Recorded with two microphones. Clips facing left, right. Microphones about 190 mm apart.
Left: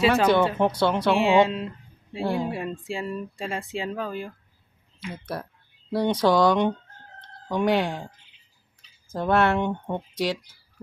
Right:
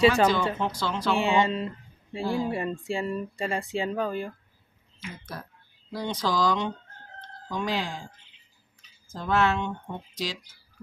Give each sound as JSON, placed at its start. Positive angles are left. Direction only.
{"t": 0.3, "sound": "speech", "side_deg": 60}
{"t": 1.1, "sound": "speech", "side_deg": 0}
{"t": 2.2, "sound": "speech", "side_deg": 60}
{"t": 2.5, "sound": "speech", "side_deg": 0}
{"t": 5.1, "sound": "speech", "side_deg": 65}
{"t": 9.1, "sound": "speech", "side_deg": 60}